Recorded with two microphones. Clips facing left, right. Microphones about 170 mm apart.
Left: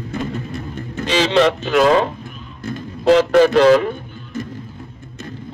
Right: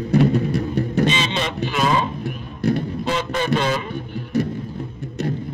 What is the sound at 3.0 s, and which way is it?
Speech, 85° left.